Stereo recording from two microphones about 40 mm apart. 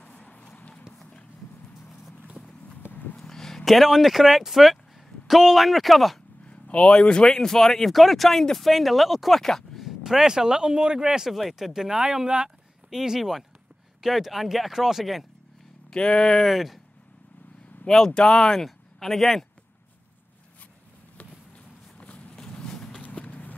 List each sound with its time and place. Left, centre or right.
0.0 s a sound: left
2.9 s a sound: left
3.2 s a sound: centre
3.6 s speech: centre
6.4 s speech: left; by 9.4 s centre
9.4 s speech: centre
9.8 s speech: centre
11.3 s speech: centre
15.9 s speech: left
16.4 s speech: centre
17.8 s speech: centre
22.0 s a sound: left
22.4 s clip-clop: centre
23.0 s clip-clop: left